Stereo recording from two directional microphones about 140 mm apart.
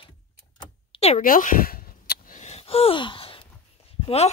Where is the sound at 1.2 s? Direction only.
80° left.